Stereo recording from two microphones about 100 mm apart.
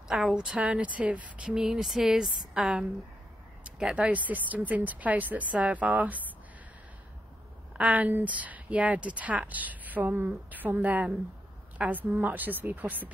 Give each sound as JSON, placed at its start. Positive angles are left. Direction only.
{"t": 0.1, "sound": "speech", "side_deg": -5}
{"t": 7.7, "sound": "speech", "side_deg": -15}